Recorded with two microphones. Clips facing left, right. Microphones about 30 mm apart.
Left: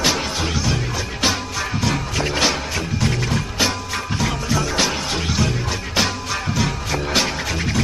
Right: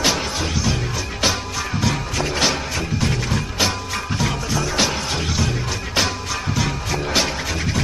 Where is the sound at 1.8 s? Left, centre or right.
Centre.